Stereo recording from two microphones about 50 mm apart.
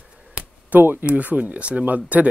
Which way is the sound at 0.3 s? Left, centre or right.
Right.